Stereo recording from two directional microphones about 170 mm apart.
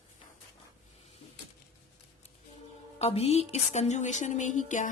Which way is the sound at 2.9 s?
35° left (ahead or behind).